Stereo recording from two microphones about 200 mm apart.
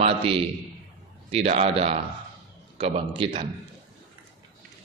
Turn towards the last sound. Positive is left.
turn(degrees=-25)  # may be behind; listen again after turning